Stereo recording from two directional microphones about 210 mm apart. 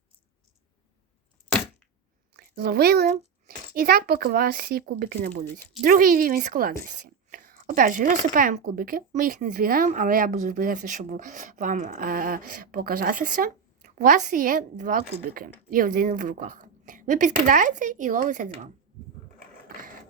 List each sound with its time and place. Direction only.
2.3 s a child's voice: 50° right (ahead or behind)